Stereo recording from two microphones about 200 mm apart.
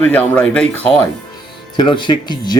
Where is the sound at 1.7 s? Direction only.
25° left (ahead or behind).